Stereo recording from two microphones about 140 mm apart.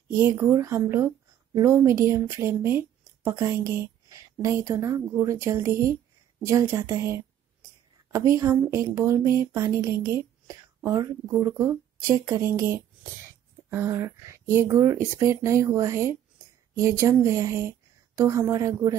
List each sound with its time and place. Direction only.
0.2 s a woman's voice: 20° right (ahead or behind)